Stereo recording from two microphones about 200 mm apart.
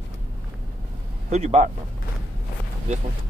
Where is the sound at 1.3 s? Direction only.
35° right (ahead or behind).